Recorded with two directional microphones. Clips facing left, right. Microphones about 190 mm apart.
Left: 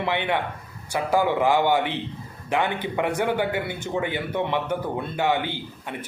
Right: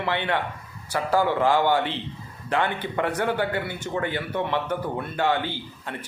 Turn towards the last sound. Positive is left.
turn(degrees=15)  # may be behind; listen again after turning